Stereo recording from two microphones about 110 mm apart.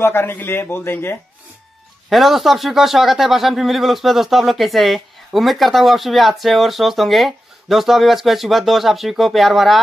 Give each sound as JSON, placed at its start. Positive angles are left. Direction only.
{"t": 0.0, "sound": "a man's voice", "side_deg": 20}
{"t": 2.0, "sound": "speech", "side_deg": 0}